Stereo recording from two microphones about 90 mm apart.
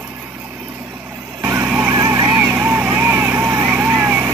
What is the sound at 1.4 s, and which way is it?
Vehicle, 20° right (ahead or behind).